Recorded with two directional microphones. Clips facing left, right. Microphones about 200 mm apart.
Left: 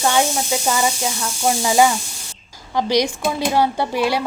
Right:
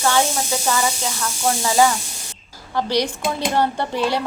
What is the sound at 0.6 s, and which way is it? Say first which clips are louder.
A woman's voice: left 1 dB; 15° left (ahead or behind).